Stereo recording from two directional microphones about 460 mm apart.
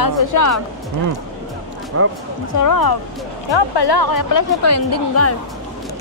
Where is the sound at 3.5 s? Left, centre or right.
Left.